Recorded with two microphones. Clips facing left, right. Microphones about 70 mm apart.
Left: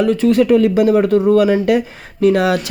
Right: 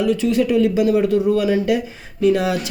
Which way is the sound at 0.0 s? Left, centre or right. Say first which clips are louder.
Left 4 dB; left.